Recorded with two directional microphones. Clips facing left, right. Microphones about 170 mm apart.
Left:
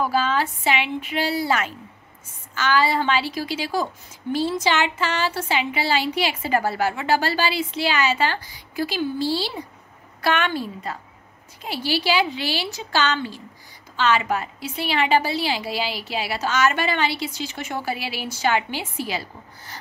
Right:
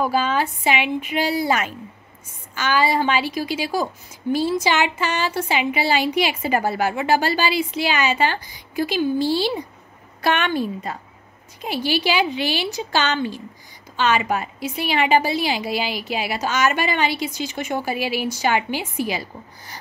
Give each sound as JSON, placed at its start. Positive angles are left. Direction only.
{"t": 0.0, "sound": "a woman's voice", "side_deg": -15}